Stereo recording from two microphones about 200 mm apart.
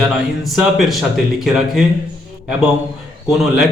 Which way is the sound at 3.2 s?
Centre (ahead or behind).